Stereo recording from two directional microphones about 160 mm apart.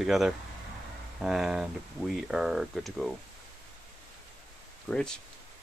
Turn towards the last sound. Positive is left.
turn(degrees=5)  # may be behind; listen again after turning